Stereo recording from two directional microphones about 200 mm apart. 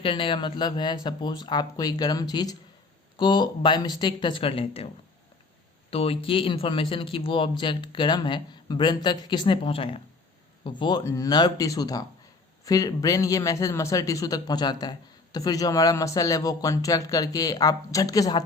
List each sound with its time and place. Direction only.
0.0 s speech: 25° left (ahead or behind)
5.9 s a man's voice: 30° left (ahead or behind)